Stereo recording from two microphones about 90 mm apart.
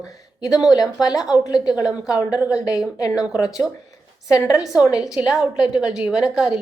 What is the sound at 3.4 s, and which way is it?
Speech, 45° left (ahead or behind).